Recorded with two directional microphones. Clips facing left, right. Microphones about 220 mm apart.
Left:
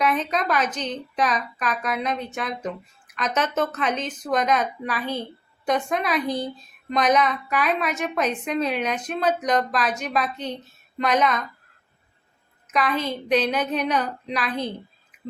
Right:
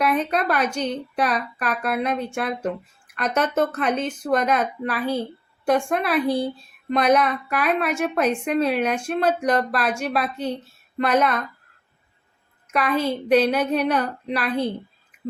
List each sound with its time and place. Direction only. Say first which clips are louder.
0.0 s a woman's voice: right 2 dB; 10° right (ahead or behind)
3.2 s speech: right 2 dB; 55° right (ahead or behind)
3.5 s a woman's voice: right 3 dB; 10° right (ahead or behind)
12.6 s a woman's voice: right 2 dB; 10° right (ahead or behind)